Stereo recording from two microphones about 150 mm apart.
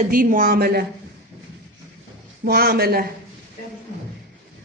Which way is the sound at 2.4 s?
90° right.